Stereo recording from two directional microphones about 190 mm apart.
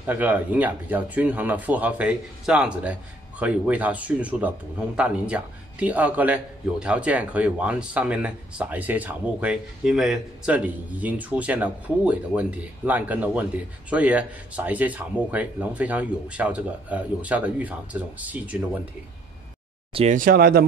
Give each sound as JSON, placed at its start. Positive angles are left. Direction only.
{"t": 0.0, "sound": "a man's voice", "side_deg": -10}
{"t": 19.9, "sound": "speech", "side_deg": -30}
{"t": 20.2, "sound": "speech", "side_deg": -50}